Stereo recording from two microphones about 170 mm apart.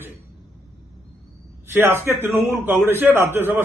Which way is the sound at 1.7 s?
15° right (ahead or behind).